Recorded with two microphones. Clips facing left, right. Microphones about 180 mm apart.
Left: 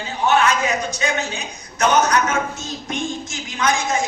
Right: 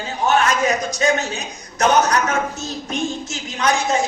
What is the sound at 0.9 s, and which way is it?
A man's voice, 40° right (ahead or behind).